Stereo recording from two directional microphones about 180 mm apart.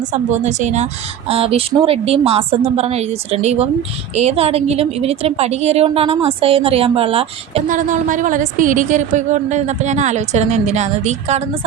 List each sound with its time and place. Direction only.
0.0 s a woman's voice: 40° right (ahead or behind)
7.7 s a woman's voice: 45° right (ahead or behind)